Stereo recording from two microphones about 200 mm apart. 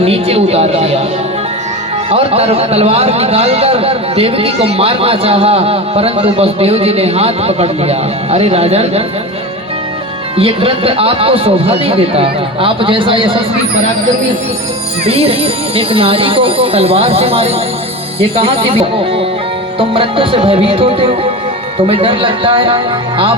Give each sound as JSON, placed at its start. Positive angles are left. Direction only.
{"t": 0.0, "sound": "speech", "side_deg": -30}
{"t": 2.0, "sound": "a man's voice", "side_deg": -30}
{"t": 10.3, "sound": "a man's voice", "side_deg": -25}
{"t": 15.0, "sound": "a man's voice", "side_deg": -30}